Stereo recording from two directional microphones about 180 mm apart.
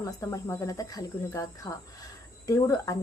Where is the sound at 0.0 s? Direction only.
15° left (ahead or behind).